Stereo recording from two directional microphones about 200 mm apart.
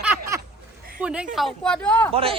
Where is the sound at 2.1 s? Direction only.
30° right (ahead or behind).